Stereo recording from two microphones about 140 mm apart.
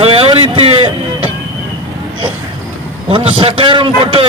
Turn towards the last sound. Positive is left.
turn(degrees=-40)  # may be behind; listen again after turning